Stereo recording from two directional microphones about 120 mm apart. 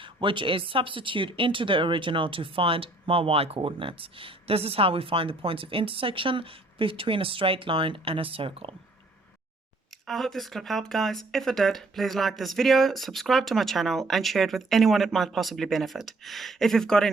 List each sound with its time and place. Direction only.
0.0 s speech: 45° right (ahead or behind)
10.1 s speech: centre (ahead or behind)